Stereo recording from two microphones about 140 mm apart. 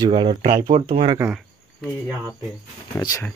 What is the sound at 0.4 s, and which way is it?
Speech, 90° right.